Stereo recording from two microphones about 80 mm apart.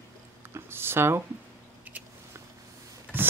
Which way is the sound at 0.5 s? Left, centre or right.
Right.